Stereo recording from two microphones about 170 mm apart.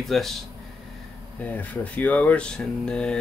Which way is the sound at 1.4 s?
10° left (ahead or behind).